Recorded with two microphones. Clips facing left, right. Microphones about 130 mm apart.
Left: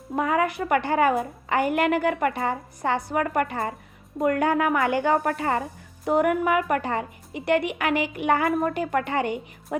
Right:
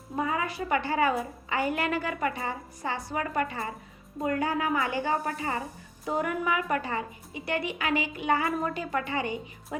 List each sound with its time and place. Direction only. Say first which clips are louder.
0.2 s a woman's voice: left 6 dB; 65° left (ahead or behind)